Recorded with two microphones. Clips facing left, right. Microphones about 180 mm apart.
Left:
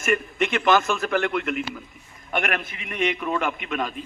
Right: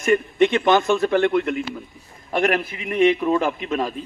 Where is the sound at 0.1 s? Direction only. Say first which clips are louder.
Right 6 dB; 25° right (ahead or behind).